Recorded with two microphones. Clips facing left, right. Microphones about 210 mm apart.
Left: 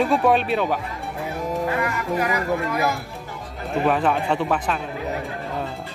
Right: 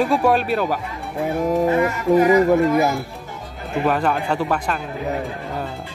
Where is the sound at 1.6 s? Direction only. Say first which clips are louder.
Right 7 dB; 25° right (ahead or behind).